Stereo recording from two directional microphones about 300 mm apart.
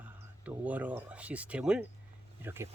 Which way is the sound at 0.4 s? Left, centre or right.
Centre.